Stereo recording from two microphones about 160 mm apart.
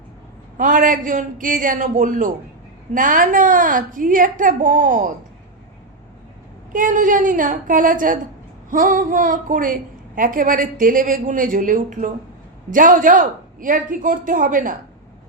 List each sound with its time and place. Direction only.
0.5 s a woman's voice: 55° right (ahead or behind)
6.7 s a woman's voice: 55° right (ahead or behind)